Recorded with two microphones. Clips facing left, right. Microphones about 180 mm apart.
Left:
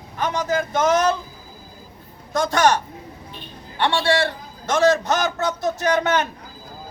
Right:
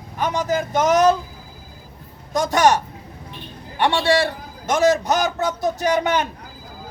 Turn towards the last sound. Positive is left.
turn(degrees=-15)  # may be behind; listen again after turning